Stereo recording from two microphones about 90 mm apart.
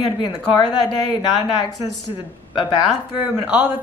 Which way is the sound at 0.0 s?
55° left (ahead or behind).